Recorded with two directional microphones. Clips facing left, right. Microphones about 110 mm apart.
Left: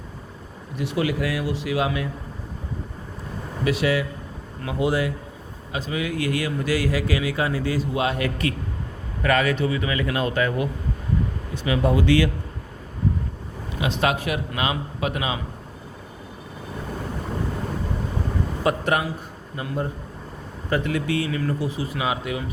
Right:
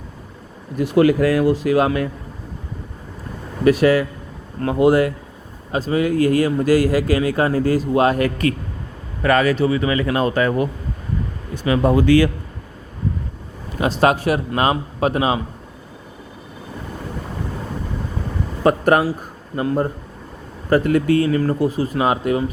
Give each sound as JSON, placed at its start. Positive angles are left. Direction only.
{"t": 0.8, "sound": "a man's voice", "side_deg": -50}
{"t": 3.6, "sound": "a man's voice", "side_deg": -45}
{"t": 13.7, "sound": "a man's voice", "side_deg": -40}
{"t": 18.6, "sound": "a man's voice", "side_deg": -40}